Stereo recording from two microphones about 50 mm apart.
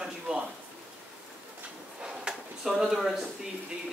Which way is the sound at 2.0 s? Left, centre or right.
Centre.